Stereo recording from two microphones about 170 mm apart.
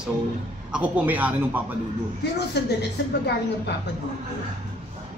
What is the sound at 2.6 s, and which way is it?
Speech, 75° left (ahead or behind).